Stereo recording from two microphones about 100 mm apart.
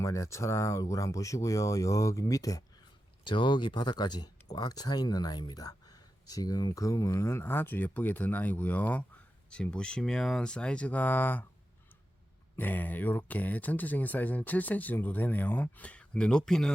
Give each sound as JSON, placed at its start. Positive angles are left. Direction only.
{"t": 0.0, "sound": "speech", "side_deg": 30}
{"t": 3.2, "sound": "speech", "side_deg": 50}
{"t": 12.5, "sound": "speech", "side_deg": 15}